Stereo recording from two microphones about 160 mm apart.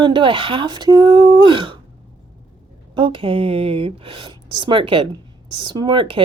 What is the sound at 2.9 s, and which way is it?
Speech, 35° right (ahead or behind).